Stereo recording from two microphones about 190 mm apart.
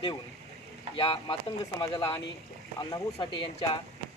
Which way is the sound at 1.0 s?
25° left (ahead or behind).